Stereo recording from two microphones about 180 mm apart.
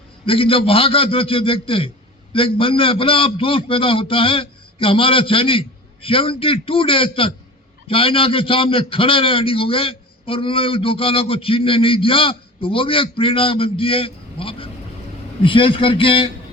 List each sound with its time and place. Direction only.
0.3 s a man's voice: 30° left (ahead or behind)